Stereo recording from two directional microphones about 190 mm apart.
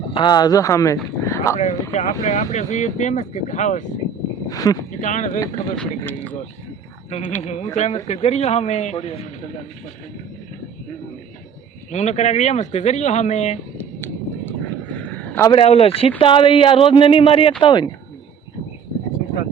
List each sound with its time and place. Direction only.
0.1 s speech: 25° left (ahead or behind)
1.2 s a sound: 15° left (ahead or behind)
1.5 s speech: 35° left (ahead or behind)
4.4 s speech: 20° left (ahead or behind)
4.9 s speech: 40° left (ahead or behind)
5.7 s speech: 5° left (ahead or behind)
7.1 s speech: 35° left (ahead or behind)
11.9 s speech: 35° left (ahead or behind)
13.7 s a sound: 10° left (ahead or behind)
15.4 s speech: 30° left (ahead or behind)